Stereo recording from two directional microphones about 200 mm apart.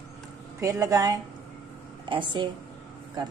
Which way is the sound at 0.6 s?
15° right (ahead or behind).